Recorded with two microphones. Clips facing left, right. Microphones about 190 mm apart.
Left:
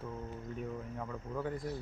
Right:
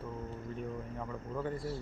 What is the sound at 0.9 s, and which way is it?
Speech, 5° left (ahead or behind).